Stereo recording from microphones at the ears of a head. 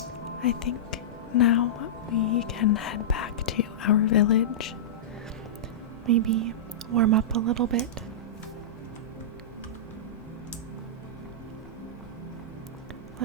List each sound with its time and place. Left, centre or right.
0.4 s a woman's voice: left
6.1 s speech: right